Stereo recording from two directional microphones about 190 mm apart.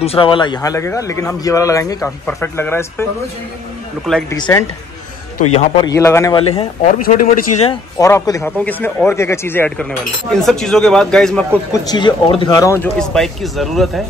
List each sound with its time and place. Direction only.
0.0 s a man's voice: 30° left (ahead or behind); by 3.1 s 10° left (ahead or behind)
4.3 s a man's voice: 15° left (ahead or behind)
5.5 s speech: 35° left (ahead or behind)
5.9 s a man's voice: 15° left (ahead or behind)
6.3 s speech: 30° left (ahead or behind)
8.0 s a man's voice: 15° left (ahead or behind)
11.7 s speech: 20° left (ahead or behind)
13.0 s speech: centre (ahead or behind)